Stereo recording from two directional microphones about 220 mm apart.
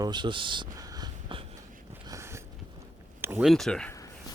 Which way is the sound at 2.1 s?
10° right (ahead or behind).